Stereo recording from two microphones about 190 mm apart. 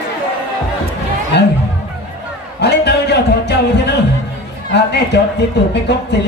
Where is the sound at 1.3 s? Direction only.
60° left (ahead or behind).